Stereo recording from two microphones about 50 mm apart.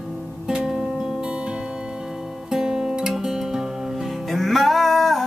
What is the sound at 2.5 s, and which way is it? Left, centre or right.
Music, centre.